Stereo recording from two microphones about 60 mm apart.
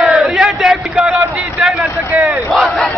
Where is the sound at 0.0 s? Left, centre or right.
Centre.